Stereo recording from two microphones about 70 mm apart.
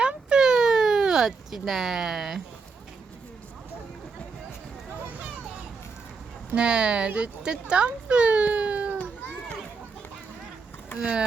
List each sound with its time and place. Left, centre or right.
0.0 s a sound: centre
6.5 s a child's voice: centre
9.0 s children playing: left
11.0 s speech: centre